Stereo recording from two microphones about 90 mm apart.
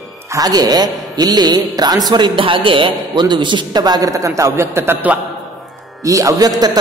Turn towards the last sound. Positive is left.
turn(degrees=-40)  # may be behind; listen again after turning